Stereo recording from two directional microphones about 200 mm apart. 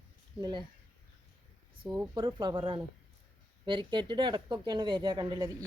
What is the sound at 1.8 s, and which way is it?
Speech, 20° right (ahead or behind).